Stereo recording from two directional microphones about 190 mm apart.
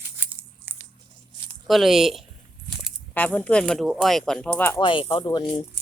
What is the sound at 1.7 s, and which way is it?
A woman's voice, centre (ahead or behind).